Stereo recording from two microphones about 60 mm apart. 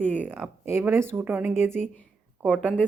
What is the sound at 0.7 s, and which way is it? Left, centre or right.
Speech, right.